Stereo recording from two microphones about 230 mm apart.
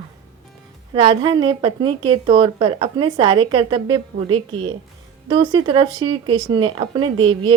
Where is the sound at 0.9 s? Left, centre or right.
Right.